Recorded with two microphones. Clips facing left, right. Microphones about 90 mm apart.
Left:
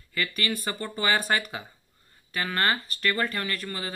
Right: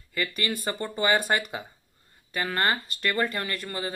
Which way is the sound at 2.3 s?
30° right (ahead or behind).